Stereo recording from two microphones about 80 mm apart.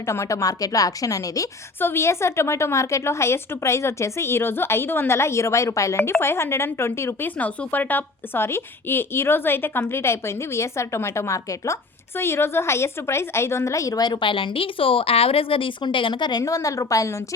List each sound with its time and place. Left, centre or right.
0.0 s a woman's voice: left
1.8 s speech: left
12.1 s speech: left
15.5 s speech: left
16.4 s a woman's voice: left